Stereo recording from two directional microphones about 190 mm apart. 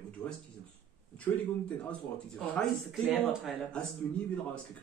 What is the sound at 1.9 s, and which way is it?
Speech, 5° left (ahead or behind).